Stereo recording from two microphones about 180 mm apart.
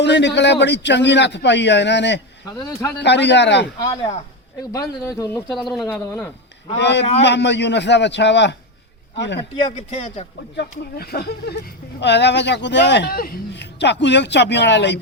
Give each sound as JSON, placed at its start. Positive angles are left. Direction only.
{"t": 0.0, "sound": "speech", "side_deg": 75}
{"t": 2.5, "sound": "speech", "side_deg": 20}
{"t": 3.0, "sound": "speech", "side_deg": 75}
{"t": 3.8, "sound": "speech", "side_deg": 25}
{"t": 5.5, "sound": "speech", "side_deg": 0}
{"t": 6.7, "sound": "speech", "side_deg": 75}
{"t": 9.4, "sound": "speech", "side_deg": 25}
{"t": 9.9, "sound": "a man's voice", "side_deg": 35}
{"t": 10.6, "sound": "speech", "side_deg": 60}